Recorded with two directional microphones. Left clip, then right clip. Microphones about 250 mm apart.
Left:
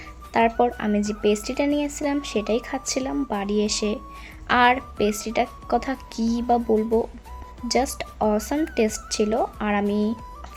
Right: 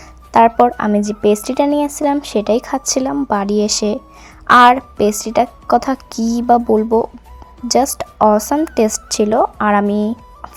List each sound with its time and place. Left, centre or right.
0.3 s speech: centre